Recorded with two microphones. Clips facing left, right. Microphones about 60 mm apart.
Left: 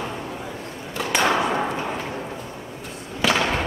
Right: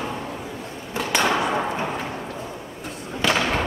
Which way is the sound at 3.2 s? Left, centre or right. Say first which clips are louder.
Left 1 dB; centre.